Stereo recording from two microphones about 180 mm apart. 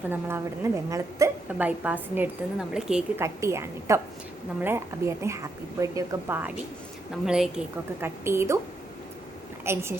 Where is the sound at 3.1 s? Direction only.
15° right (ahead or behind).